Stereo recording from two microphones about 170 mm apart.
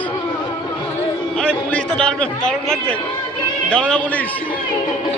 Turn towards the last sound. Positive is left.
turn(degrees=5)  # may be behind; listen again after turning